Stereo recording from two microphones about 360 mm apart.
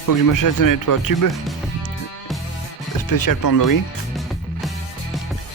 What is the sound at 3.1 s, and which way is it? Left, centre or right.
Speech, left.